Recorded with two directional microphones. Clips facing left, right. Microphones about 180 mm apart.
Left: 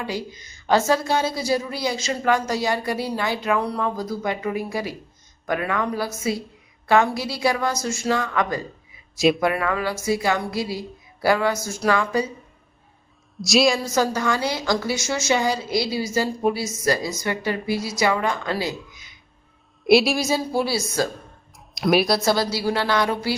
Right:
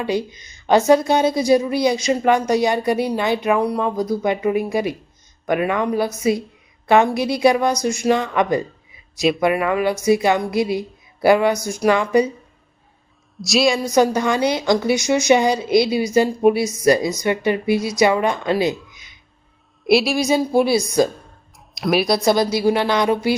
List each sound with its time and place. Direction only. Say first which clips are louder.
0.0 s a woman's voice: right 7 dB; 20° right (ahead or behind)
9.1 s speech: even; centre (ahead or behind)
9.4 s a woman's voice: right 5 dB; 20° right (ahead or behind)
13.4 s a woman's voice: right 1 dB; centre (ahead or behind)
13.7 s a woman's voice: right 6 dB; 20° right (ahead or behind)
19.9 s a woman's voice: even; centre (ahead or behind)
20.2 s a woman's voice: right 6 dB; 20° right (ahead or behind)
21.8 s speech: even; centre (ahead or behind)
22.1 s a woman's voice: right 4 dB; 20° right (ahead or behind)